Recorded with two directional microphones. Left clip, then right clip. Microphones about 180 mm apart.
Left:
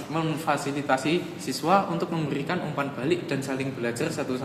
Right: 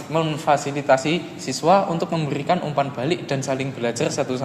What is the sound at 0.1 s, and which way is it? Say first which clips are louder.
A man's voice: right 7 dB; 20° right (ahead or behind).